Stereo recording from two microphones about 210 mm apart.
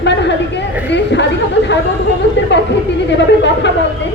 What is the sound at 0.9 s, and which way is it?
Chatter, 55° left (ahead or behind).